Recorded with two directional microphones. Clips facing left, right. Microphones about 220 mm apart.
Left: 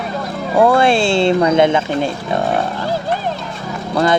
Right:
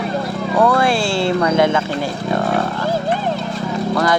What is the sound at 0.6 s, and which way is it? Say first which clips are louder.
Speech: left 4 dB; 25° left (ahead or behind).